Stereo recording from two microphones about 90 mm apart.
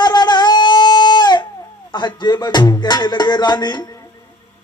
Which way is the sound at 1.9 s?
55° left (ahead or behind).